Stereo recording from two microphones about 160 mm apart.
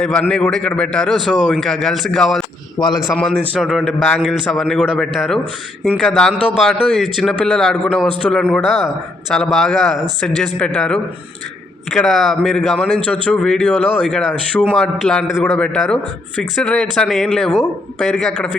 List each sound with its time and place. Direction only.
0.0 s a man's voice: 5° left (ahead or behind)
2.7 s a man's voice: 25° left (ahead or behind)
3.0 s a man's voice: centre (ahead or behind)
4.0 s a man's voice: 10° left (ahead or behind)